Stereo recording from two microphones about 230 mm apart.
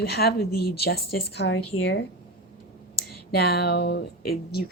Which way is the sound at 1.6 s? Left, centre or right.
Left.